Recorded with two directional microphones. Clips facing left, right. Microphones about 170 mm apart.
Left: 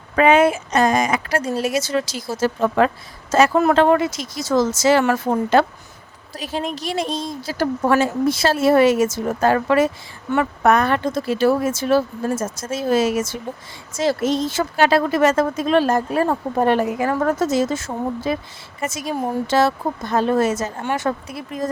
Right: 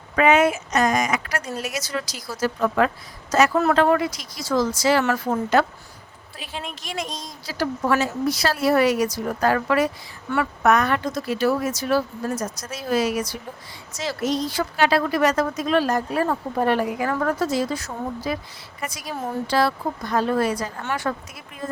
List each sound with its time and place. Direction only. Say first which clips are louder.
0.2 s speech: left 3 dB; 30° left (ahead or behind)
6.3 s speech: left 9 dB; 40° left (ahead or behind)
7.4 s speech: left 3 dB; 50° left (ahead or behind)
8.2 s speech: left 4 dB; 25° left (ahead or behind)